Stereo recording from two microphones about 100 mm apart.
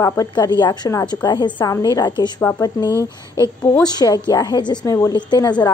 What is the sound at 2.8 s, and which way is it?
Speech, 30° right (ahead or behind).